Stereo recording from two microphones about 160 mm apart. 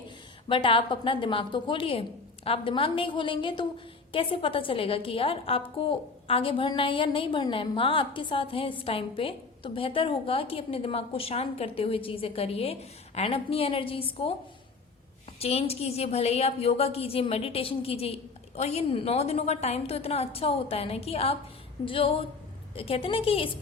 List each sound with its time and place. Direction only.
0.4 s a woman's voice: 30° left (ahead or behind)
15.4 s a woman's voice: 40° left (ahead or behind)